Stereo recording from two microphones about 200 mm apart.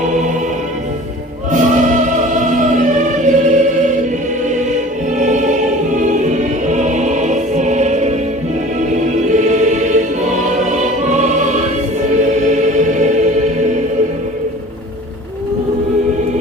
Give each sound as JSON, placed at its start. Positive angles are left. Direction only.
{"t": 0.0, "sound": "music", "side_deg": -35}
{"t": 1.5, "sound": "music", "side_deg": -40}